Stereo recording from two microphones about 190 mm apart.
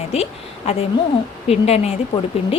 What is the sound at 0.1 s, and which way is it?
A woman's voice, 35° left (ahead or behind).